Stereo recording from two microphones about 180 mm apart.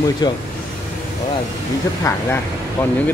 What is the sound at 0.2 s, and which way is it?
Speech, 25° left (ahead or behind).